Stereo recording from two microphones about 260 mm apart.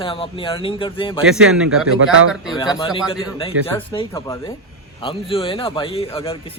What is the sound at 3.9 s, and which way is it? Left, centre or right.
A man's voice, centre.